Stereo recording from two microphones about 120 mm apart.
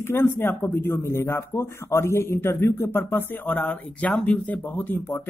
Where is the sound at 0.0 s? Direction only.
20° left (ahead or behind).